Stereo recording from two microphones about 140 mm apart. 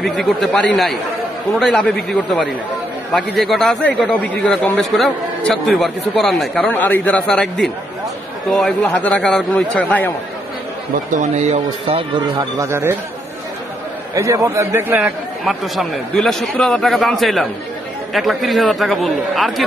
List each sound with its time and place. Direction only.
0.0 s a man's voice: centre (ahead or behind)
11.1 s speech: 55° right (ahead or behind)
12.4 s speech: 20° right (ahead or behind)
14.1 s speech: 25° right (ahead or behind)
15.4 s a man's voice: centre (ahead or behind)